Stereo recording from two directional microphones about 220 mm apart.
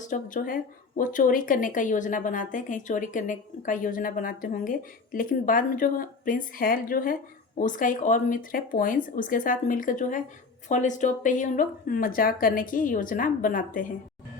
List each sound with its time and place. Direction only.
0.0 s a woman's voice: 35° left (ahead or behind)